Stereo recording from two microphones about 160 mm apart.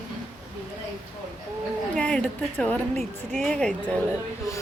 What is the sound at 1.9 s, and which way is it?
Speech, 5° left (ahead or behind).